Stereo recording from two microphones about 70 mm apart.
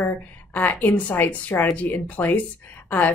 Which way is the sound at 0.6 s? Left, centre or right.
Left.